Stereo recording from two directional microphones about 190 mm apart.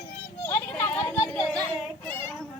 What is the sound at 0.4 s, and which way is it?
Children playing, 10° left (ahead or behind).